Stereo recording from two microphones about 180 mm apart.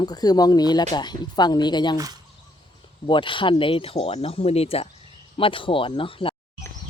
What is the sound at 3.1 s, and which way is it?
Speech, 25° left (ahead or behind).